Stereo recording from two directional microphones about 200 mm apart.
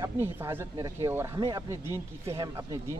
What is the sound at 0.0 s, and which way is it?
Speech, 10° right (ahead or behind).